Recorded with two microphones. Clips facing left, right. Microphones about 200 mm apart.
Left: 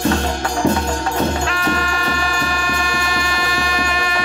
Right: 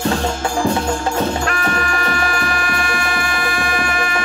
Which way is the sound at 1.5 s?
55° right (ahead or behind).